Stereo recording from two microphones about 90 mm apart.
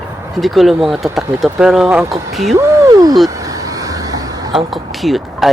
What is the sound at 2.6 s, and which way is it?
Speech, 35° right (ahead or behind).